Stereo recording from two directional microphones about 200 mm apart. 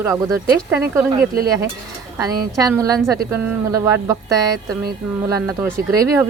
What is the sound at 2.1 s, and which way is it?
Speech, 15° right (ahead or behind).